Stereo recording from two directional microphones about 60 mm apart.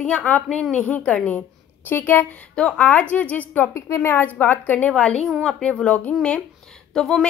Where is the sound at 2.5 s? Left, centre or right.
Centre.